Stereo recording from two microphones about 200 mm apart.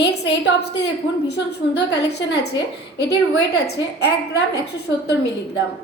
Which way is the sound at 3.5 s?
55° left (ahead or behind).